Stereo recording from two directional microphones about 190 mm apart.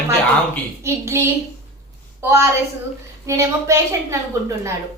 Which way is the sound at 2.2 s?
15° right (ahead or behind).